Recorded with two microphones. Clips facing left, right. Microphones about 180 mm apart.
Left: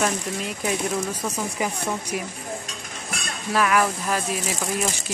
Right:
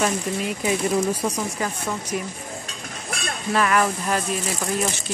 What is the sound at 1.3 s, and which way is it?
Speech, 10° left (ahead or behind).